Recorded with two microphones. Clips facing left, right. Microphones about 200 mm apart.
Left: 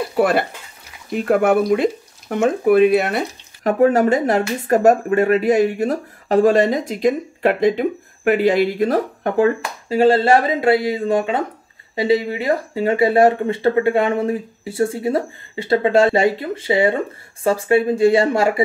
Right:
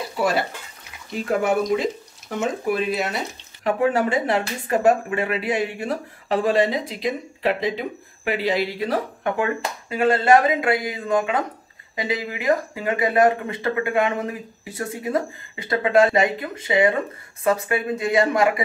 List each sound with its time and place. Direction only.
0.1 s speech: 55° left (ahead or behind)
3.6 s speech: 45° left (ahead or behind)
9.8 s speech: 30° left (ahead or behind)